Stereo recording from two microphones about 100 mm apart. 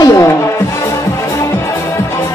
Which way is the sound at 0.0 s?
35° left (ahead or behind).